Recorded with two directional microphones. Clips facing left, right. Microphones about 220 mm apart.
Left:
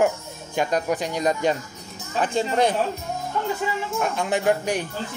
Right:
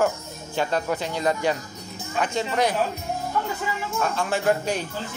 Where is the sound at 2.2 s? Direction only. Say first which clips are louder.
Left 2 dB; 30° left (ahead or behind).